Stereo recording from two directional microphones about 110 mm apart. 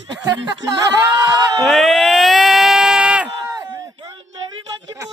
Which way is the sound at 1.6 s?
Centre (ahead or behind).